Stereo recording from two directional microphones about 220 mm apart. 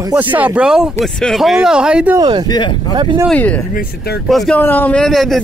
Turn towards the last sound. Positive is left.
turn(degrees=0)  # may be behind; listen again after turning